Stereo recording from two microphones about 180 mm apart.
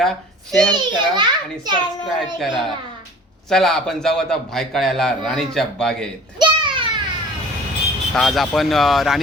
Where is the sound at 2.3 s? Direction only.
Centre (ahead or behind).